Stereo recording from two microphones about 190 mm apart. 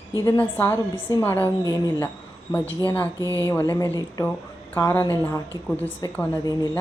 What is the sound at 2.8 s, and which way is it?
Speech, 10° left (ahead or behind).